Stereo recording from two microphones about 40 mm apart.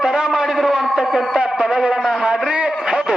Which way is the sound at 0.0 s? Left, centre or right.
Centre.